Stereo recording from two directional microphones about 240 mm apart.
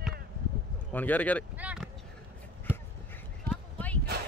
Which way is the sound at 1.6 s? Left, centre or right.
Centre.